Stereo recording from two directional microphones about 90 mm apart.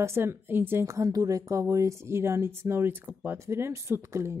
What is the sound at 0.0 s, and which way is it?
A woman's voice, 30° right (ahead or behind).